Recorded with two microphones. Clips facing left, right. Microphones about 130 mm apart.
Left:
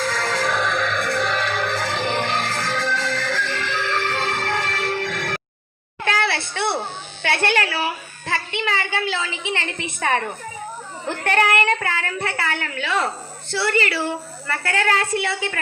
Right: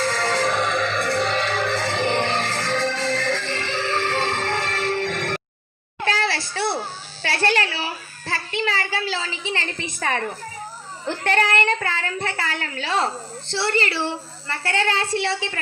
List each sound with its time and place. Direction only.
0.0 s music: 30° right (ahead or behind)
6.1 s a sound: 35° right (ahead or behind)
11.1 s a child's voice: 30° right (ahead or behind)